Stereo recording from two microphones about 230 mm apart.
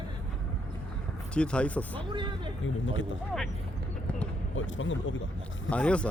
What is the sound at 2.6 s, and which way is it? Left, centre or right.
Speech, left.